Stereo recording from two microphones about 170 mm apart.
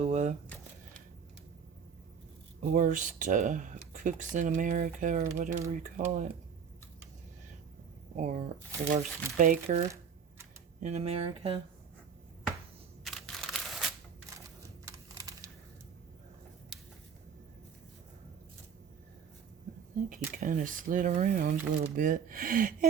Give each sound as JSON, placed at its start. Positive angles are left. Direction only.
{"t": 0.0, "sound": "speech", "side_deg": -40}
{"t": 2.7, "sound": "speech", "side_deg": -45}
{"t": 8.1, "sound": "speech", "side_deg": -45}
{"t": 10.8, "sound": "speech", "side_deg": -40}
{"t": 13.1, "sound": "crumpling", "side_deg": 0}
{"t": 14.8, "sound": "computer keyboard", "side_deg": -20}
{"t": 20.1, "sound": "speech", "side_deg": -50}